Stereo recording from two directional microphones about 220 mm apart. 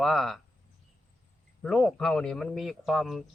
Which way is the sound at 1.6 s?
Centre (ahead or behind).